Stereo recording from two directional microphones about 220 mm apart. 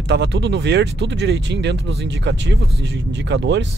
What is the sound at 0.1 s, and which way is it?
Speech, 50° right (ahead or behind).